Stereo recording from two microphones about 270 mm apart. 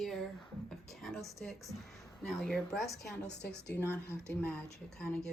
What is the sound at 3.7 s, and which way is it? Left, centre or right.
Speech, centre.